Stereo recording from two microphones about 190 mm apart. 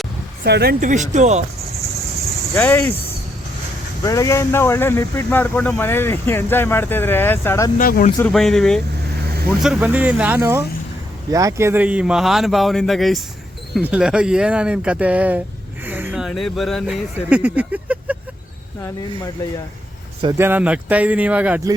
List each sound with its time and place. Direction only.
0.4 s speech: 55° right (ahead or behind); by 1.5 s 35° right (ahead or behind)
2.6 s speech: 10° left (ahead or behind)
7.8 s speech: 45° left (ahead or behind)
8.2 s speech: centre (ahead or behind)
15.9 s a sound: 10° right (ahead or behind)
17.2 s speech: 5° right (ahead or behind)
20.4 s speech: 10° right (ahead or behind)